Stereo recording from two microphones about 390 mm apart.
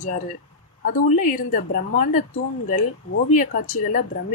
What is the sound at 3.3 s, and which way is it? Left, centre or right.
Speech, centre.